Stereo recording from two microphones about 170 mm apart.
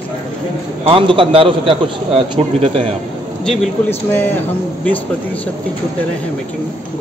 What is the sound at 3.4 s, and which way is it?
Speech, 5° left (ahead or behind).